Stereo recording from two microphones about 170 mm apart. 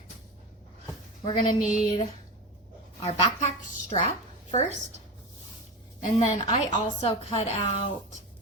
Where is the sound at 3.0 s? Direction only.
40° left (ahead or behind).